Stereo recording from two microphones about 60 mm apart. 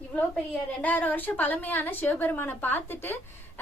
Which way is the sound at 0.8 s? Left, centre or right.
Left.